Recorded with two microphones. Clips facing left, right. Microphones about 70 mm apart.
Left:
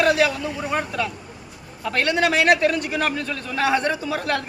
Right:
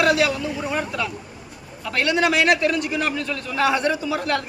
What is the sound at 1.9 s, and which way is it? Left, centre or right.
A man's voice, left.